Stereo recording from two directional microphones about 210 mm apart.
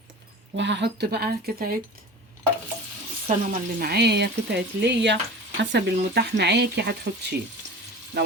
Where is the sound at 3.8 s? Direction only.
50° right (ahead or behind).